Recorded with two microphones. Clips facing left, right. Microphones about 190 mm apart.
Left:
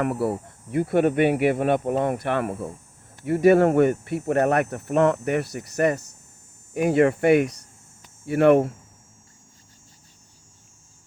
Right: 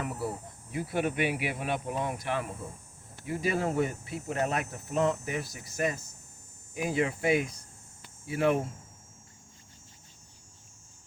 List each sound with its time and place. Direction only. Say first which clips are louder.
0.0 s speech: left 10 dB; 65° left (ahead or behind)